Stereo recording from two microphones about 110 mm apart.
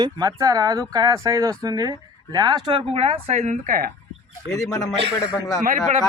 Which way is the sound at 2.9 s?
60° right (ahead or behind).